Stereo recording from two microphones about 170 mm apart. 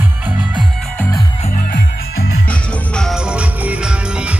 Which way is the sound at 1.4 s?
50° left (ahead or behind).